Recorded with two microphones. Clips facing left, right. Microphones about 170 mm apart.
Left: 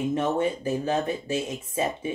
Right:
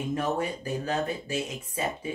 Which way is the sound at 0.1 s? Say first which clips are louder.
Left 1 dB; 25° left (ahead or behind).